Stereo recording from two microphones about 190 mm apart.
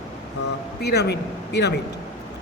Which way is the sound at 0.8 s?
60° left (ahead or behind).